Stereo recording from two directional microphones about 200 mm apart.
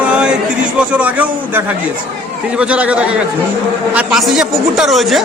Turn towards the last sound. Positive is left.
turn(degrees=0)  # may be behind; listen again after turning